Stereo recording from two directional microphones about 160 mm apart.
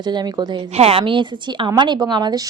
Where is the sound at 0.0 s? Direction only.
25° right (ahead or behind).